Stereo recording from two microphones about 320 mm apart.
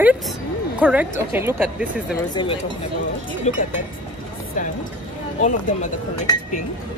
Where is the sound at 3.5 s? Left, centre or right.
Centre.